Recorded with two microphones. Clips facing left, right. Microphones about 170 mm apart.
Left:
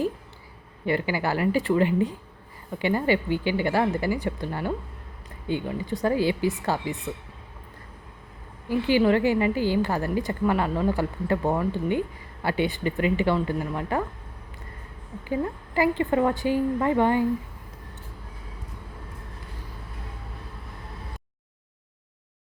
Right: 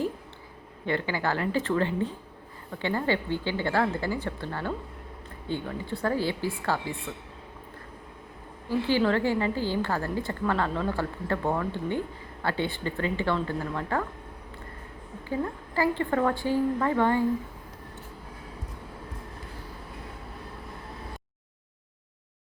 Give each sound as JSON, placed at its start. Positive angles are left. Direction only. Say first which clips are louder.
{"t": 0.9, "sound": "a woman's voice", "louder": "left 3 dB", "side_deg": 10}
{"t": 8.7, "sound": "a woman's voice", "louder": "left 4 dB", "side_deg": 15}
{"t": 15.3, "sound": "a woman's voice", "louder": "left 3 dB", "side_deg": 15}